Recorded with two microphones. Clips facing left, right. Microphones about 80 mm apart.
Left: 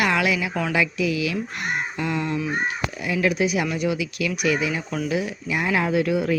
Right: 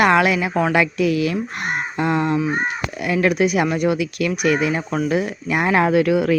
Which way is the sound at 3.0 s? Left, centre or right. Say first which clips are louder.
Right 5 dB; right.